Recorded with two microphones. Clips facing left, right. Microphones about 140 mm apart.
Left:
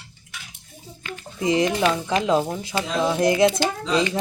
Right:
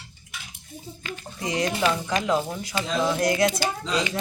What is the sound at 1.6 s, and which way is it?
Speech, 20° left (ahead or behind).